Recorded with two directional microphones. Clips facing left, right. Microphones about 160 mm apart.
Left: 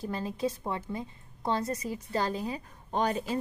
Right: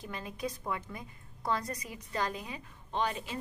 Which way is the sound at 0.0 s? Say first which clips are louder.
Left 7 dB; 35° left (ahead or behind).